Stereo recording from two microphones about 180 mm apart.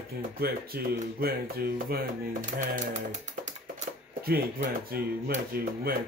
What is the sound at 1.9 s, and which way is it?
Speech, 45° right (ahead or behind).